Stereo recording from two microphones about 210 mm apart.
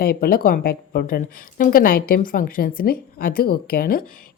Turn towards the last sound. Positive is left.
turn(degrees=45)  # may be behind; listen again after turning